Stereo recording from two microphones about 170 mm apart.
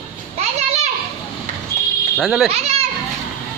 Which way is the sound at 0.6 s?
40° right (ahead or behind).